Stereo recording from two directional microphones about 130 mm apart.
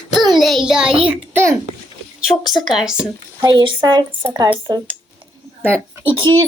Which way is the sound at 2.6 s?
5° right (ahead or behind).